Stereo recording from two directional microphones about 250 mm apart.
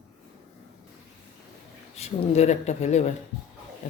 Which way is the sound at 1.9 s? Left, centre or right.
Left.